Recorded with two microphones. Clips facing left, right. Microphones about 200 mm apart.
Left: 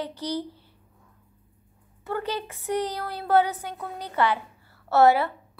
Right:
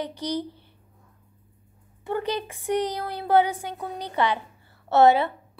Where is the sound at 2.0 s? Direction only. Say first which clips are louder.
Right 2 dB; 15° right (ahead or behind).